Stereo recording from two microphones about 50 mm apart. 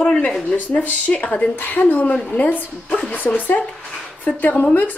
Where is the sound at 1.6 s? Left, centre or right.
Left.